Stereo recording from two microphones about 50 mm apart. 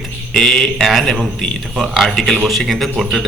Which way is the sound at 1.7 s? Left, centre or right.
Centre.